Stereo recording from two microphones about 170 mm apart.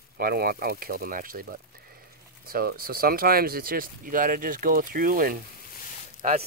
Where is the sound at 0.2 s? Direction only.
60° right (ahead or behind).